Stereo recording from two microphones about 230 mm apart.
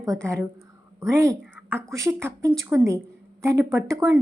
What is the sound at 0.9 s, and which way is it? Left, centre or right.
A woman's voice, centre.